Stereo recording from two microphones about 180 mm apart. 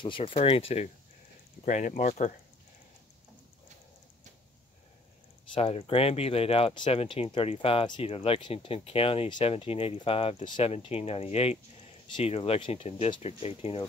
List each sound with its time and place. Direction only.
0.0 s speech: 30° left (ahead or behind)
5.5 s speech: 30° left (ahead or behind)